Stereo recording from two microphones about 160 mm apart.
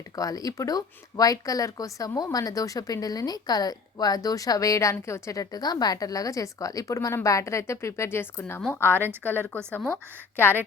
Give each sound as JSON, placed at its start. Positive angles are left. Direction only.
{"t": 0.2, "sound": "a woman's voice", "side_deg": 20}